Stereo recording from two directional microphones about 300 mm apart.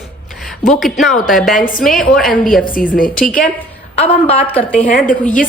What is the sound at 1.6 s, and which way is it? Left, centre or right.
A woman's voice, left.